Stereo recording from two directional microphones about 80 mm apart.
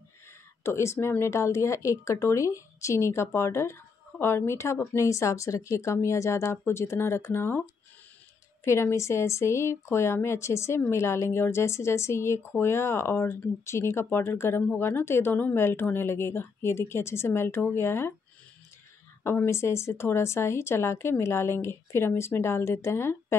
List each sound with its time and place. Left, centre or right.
0.7 s speech: left
8.6 s speech: left
19.2 s speech: left